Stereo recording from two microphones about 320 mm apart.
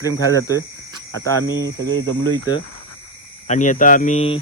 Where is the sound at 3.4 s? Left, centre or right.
Left.